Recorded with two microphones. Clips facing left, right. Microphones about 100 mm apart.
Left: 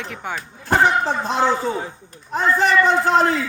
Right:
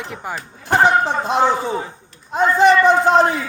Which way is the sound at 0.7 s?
20° right (ahead or behind).